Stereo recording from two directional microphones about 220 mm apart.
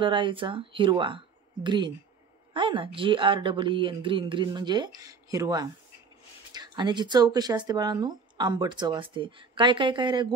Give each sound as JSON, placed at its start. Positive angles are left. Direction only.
{"t": 0.0, "sound": "speech", "side_deg": -20}